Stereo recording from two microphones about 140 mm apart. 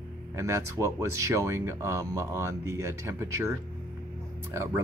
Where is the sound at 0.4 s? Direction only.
20° right (ahead or behind).